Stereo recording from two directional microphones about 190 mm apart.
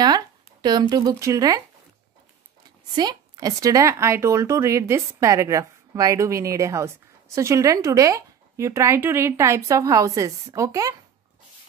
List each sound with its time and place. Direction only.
0.0 s speech: 20° right (ahead or behind)
3.0 s a woman's voice: 20° right (ahead or behind)